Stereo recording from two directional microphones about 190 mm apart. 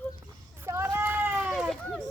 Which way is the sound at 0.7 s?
10° right (ahead or behind).